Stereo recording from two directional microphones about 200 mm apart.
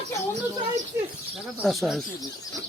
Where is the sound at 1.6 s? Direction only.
Centre (ahead or behind).